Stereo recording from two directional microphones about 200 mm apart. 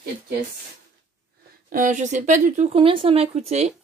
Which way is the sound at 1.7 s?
40° right (ahead or behind).